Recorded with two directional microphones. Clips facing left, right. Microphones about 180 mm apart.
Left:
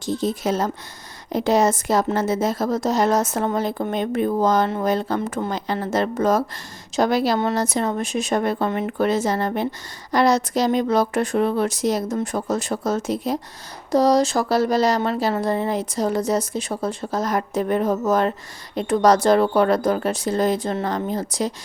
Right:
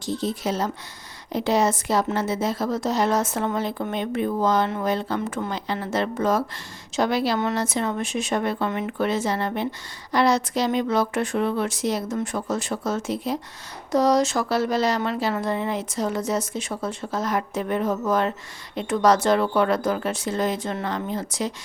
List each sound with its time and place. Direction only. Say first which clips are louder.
0.0 s a woman's voice: left 3 dB; 45° left (ahead or behind)